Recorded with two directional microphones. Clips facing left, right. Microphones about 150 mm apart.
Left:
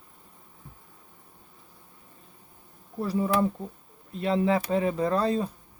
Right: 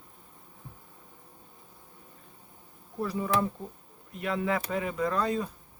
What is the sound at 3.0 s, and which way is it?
Speech, 30° left (ahead or behind).